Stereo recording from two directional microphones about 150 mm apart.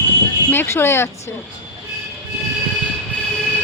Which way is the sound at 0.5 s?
15° left (ahead or behind).